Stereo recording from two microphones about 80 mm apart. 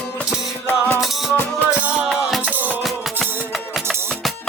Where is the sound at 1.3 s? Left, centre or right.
Left.